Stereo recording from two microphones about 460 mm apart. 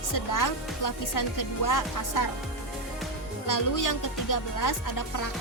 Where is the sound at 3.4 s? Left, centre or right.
Left.